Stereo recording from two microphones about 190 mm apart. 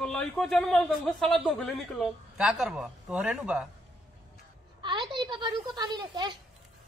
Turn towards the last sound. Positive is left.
turn(degrees=-25)  # may be behind; listen again after turning